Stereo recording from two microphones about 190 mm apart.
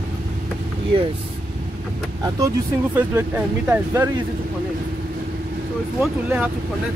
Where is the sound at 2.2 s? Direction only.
15° right (ahead or behind).